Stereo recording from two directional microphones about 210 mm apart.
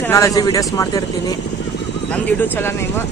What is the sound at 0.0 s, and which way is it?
Speech, 15° left (ahead or behind).